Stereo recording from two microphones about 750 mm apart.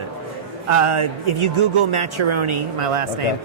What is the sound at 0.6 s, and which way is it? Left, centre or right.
Speech, right.